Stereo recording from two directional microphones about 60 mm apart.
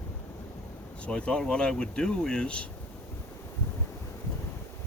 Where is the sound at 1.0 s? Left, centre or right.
Centre.